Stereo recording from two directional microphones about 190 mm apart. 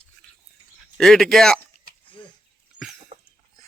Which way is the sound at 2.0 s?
25° left (ahead or behind).